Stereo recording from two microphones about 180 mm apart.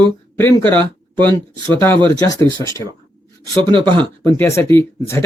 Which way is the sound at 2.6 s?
25° right (ahead or behind).